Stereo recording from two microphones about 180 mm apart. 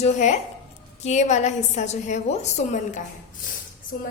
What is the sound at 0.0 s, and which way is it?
A woman's voice, 40° left (ahead or behind).